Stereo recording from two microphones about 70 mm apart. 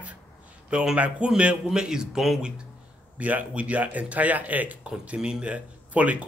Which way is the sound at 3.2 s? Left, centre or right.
Right.